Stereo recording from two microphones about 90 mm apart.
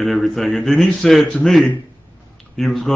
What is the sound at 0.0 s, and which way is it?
A man's voice, centre (ahead or behind).